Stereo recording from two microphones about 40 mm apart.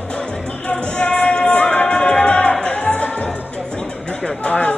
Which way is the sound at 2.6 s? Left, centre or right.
Left.